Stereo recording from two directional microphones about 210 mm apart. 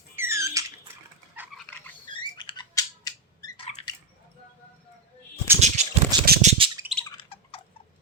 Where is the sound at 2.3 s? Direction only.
20° left (ahead or behind).